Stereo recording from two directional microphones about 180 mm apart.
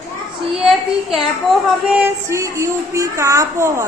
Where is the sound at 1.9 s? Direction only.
15° right (ahead or behind).